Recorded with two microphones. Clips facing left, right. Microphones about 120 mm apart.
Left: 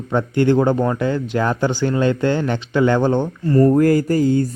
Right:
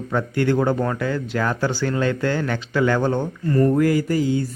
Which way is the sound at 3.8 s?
45° left (ahead or behind).